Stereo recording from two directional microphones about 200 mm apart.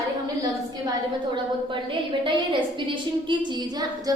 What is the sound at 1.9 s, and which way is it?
A woman's voice, 25° right (ahead or behind).